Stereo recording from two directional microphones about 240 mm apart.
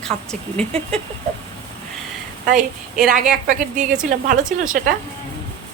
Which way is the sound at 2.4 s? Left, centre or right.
Right.